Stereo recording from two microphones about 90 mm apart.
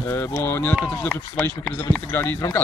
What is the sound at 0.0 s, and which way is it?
Speech, 30° left (ahead or behind).